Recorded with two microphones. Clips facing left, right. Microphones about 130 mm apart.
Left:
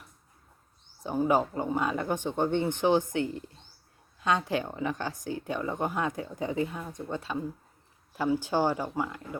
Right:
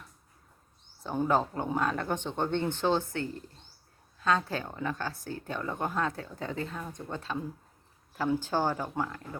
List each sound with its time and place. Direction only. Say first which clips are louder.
1.0 s speech: left 2 dB; 10° left (ahead or behind)